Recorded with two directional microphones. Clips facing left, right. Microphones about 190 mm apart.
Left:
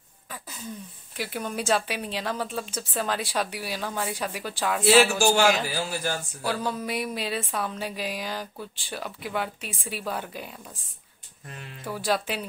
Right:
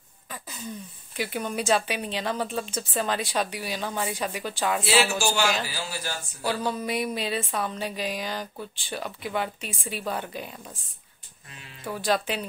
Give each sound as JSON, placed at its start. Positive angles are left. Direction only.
{"t": 1.1, "sound": "speech", "side_deg": 0}
{"t": 4.8, "sound": "speech", "side_deg": 50}
{"t": 6.4, "sound": "speech", "side_deg": 0}
{"t": 11.8, "sound": "speech", "side_deg": 5}